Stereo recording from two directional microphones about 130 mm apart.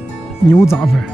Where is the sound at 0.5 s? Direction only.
20° left (ahead or behind).